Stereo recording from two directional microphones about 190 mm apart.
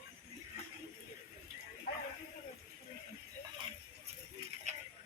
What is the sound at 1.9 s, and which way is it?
Bow-wow, 50° left (ahead or behind).